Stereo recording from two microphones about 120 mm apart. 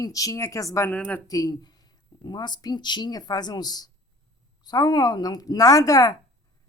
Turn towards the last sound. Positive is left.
turn(degrees=30)  # may be behind; listen again after turning